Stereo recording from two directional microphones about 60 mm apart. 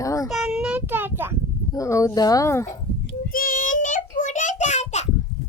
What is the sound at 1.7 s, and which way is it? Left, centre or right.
Speech, left.